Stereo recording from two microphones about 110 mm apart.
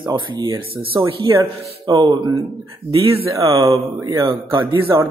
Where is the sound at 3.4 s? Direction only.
30° right (ahead or behind).